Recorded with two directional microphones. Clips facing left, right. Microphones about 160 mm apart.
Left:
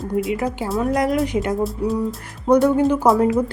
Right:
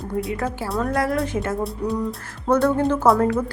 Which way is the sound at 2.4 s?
15° left (ahead or behind).